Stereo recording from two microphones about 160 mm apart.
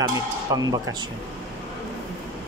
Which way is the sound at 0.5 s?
20° right (ahead or behind).